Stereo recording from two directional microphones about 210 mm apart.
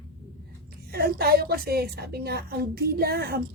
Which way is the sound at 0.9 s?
45° right (ahead or behind).